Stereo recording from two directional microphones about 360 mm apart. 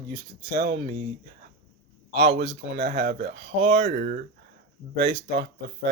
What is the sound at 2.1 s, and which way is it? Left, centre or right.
Speech, right.